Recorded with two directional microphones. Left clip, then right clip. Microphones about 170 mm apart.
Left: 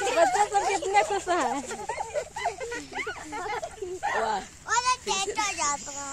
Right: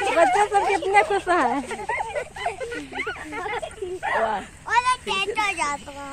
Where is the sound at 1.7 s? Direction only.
5° right (ahead or behind).